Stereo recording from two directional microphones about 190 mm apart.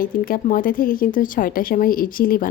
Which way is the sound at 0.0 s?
45° left (ahead or behind).